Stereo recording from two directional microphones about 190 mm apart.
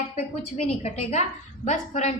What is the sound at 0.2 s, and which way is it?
A woman's voice, 35° left (ahead or behind).